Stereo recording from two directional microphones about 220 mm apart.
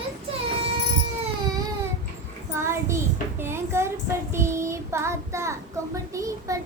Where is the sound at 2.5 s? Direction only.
10° right (ahead or behind).